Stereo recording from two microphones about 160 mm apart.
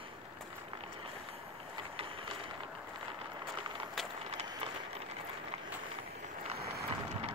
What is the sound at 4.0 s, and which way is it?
Vehicle, centre (ahead or behind).